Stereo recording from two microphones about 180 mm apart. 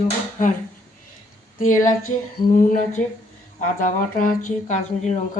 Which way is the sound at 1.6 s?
45° left (ahead or behind).